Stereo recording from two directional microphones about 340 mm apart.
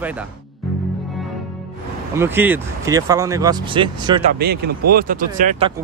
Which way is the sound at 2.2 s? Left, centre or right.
Centre.